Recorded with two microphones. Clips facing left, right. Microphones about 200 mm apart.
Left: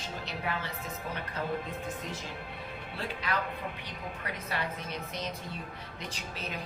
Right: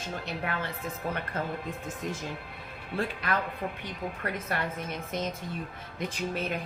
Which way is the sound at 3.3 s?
55° right (ahead or behind).